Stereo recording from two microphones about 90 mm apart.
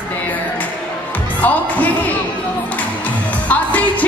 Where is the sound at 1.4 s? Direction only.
20° left (ahead or behind).